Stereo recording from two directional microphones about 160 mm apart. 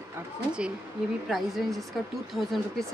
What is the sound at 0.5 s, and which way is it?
Speech, 5° right (ahead or behind).